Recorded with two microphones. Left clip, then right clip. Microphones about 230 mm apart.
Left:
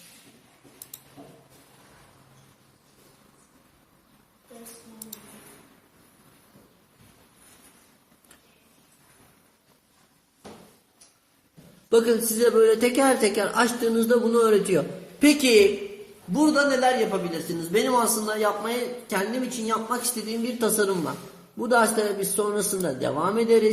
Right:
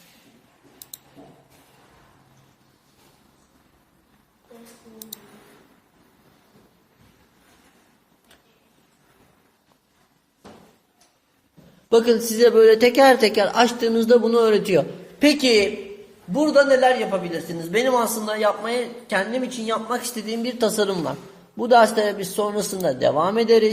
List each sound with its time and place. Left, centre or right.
11.9 s a man's voice: right